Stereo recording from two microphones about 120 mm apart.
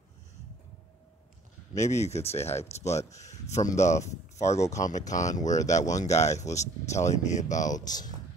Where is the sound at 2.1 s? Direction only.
60° left (ahead or behind).